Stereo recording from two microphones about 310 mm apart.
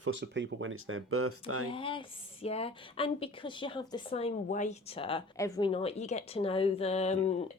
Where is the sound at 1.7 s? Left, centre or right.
Centre.